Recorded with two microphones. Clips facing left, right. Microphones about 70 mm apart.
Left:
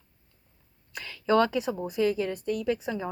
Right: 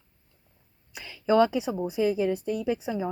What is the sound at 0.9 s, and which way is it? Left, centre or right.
Speech, centre.